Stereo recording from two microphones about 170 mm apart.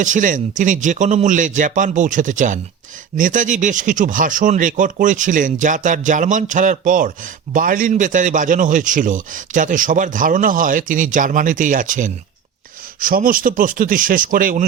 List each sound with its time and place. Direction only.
0.0 s a man's voice: 50° right (ahead or behind)